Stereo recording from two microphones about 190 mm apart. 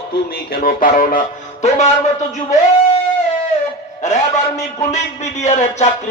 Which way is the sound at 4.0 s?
40° left (ahead or behind).